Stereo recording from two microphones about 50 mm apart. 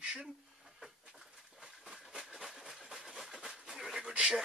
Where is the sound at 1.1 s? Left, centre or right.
Centre.